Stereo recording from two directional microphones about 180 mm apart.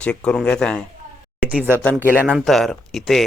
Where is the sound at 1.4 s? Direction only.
10° right (ahead or behind).